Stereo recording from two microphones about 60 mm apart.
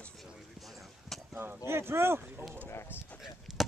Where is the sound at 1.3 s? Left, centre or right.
Right.